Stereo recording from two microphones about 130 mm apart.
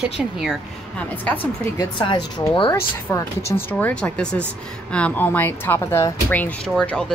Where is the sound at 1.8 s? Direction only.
35° left (ahead or behind).